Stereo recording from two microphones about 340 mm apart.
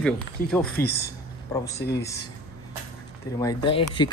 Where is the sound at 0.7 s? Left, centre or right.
Left.